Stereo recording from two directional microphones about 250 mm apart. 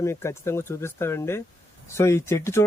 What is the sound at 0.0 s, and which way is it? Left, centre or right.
Speech, centre.